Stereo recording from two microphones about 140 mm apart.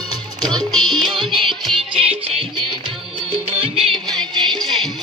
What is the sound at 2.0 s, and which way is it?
Music, 40° right (ahead or behind).